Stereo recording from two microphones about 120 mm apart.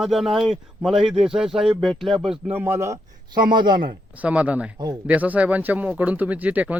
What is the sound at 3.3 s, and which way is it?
Speech, 40° right (ahead or behind).